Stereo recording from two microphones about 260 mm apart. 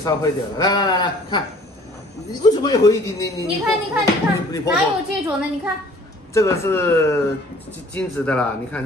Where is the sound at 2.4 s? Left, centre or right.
Centre.